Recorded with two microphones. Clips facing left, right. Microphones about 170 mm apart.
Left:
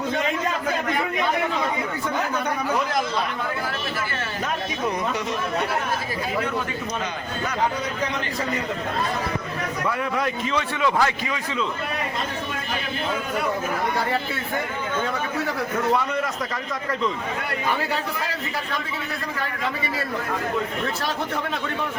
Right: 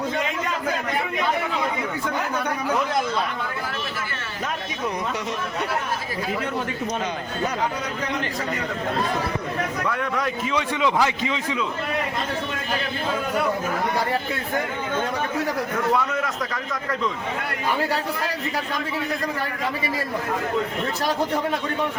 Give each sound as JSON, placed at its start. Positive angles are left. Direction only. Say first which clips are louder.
{"t": 10.2, "sound": "a man's voice", "louder": "left 1 dB", "side_deg": 0}
{"t": 10.5, "sound": "a man's voice", "louder": "right 2 dB", "side_deg": -15}